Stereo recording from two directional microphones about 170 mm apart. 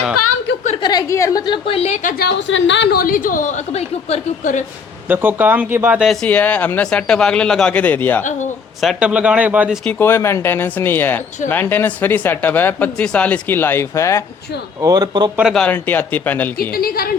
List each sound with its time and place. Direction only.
0.8 s a woman's voice: 25° left (ahead or behind); by 2.1 s 40° left (ahead or behind)
2.1 s a woman's voice: 80° left; by 4.6 s 45° left (ahead or behind)
5.0 s speech: 10° right (ahead or behind)
6.2 s speech: 10° left (ahead or behind)
8.2 s a woman's voice: 45° left (ahead or behind)
8.8 s speech: 5° right (ahead or behind)
9.8 s speech: 15° left (ahead or behind)
14.8 s speech: 20° right (ahead or behind)
15.4 s speech: centre (ahead or behind)
16.6 s a woman's voice: 60° left (ahead or behind)